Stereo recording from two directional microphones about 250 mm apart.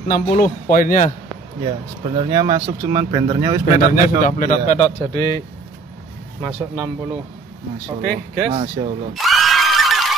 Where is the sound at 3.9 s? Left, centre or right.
Left.